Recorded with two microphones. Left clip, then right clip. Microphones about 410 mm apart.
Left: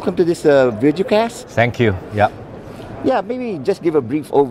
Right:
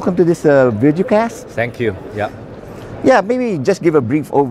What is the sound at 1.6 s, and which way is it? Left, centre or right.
Speech, left.